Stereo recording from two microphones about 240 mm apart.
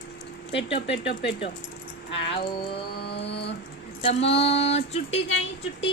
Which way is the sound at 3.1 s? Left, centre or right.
Left.